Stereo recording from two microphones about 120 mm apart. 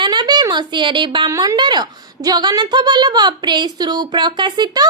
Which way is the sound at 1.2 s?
30° right (ahead or behind).